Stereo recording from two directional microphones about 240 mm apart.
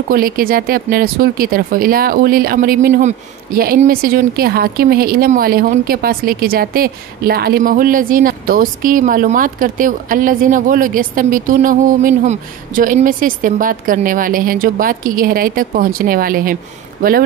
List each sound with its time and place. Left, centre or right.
0.1 s speech: right